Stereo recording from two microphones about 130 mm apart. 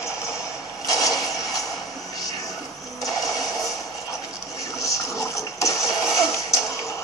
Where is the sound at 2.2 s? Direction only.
30° left (ahead or behind).